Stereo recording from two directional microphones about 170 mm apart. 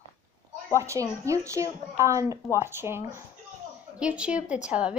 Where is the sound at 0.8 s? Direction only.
15° right (ahead or behind).